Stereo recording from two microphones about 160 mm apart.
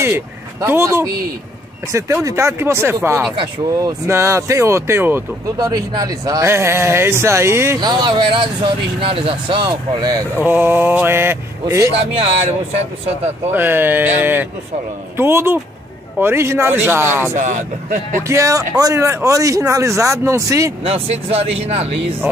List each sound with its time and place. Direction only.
0.0 s speech: 15° right (ahead or behind)
10.4 s speech: 10° right (ahead or behind)
12.1 s speech: 40° right (ahead or behind)
13.5 s speech: 15° right (ahead or behind)
17.3 s speech: 50° right (ahead or behind)
18.2 s speech: 20° right (ahead or behind)
20.8 s speech: 40° right (ahead or behind)
22.2 s speech: 10° right (ahead or behind)